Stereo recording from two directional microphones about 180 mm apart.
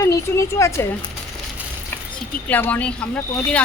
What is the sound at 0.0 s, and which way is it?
Speech, 15° left (ahead or behind).